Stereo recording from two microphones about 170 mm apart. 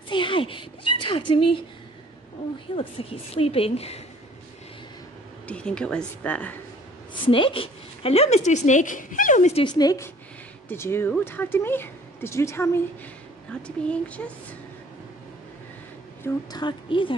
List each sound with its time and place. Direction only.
0.1 s a sound: 30° left (ahead or behind)
2.7 s a woman's voice: 35° left (ahead or behind)
5.5 s speech: 5° left (ahead or behind)
7.2 s a woman's voice: 30° left (ahead or behind)
9.7 s a woman's voice: 20° left (ahead or behind)
16.5 s a woman's voice: 30° left (ahead or behind)